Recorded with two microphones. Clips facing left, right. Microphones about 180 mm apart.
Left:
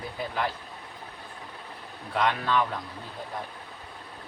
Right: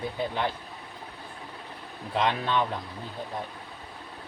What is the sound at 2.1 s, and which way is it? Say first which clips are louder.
Speech: even; 25° right (ahead or behind).